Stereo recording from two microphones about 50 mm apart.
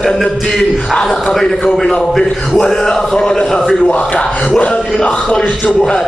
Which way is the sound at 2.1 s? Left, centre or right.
Centre.